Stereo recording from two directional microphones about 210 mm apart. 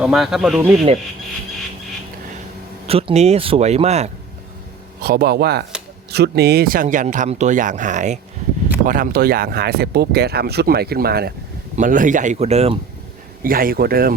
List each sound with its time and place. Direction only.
0.0 s speech: centre (ahead or behind)
2.8 s speech: 30° right (ahead or behind)
5.0 s speech: 50° right (ahead or behind); by 12.7 s 30° right (ahead or behind)
13.4 s speech: 45° right (ahead or behind)